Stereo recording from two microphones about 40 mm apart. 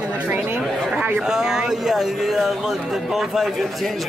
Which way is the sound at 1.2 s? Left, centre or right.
Centre.